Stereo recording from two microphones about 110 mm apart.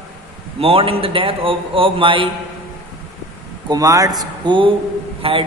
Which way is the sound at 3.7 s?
30° right (ahead or behind).